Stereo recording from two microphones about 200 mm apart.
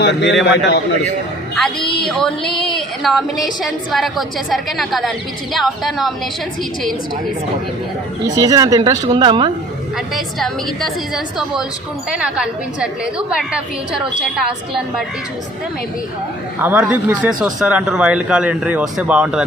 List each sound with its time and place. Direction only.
0.0 s a man's voice: 60° left (ahead or behind)
1.5 s speech: centre (ahead or behind)
8.4 s speech: 15° right (ahead or behind)
10.2 s speech: centre (ahead or behind)
16.6 s speech: 10° right (ahead or behind)